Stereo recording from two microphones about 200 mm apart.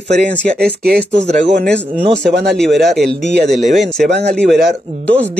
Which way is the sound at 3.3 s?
55° right (ahead or behind).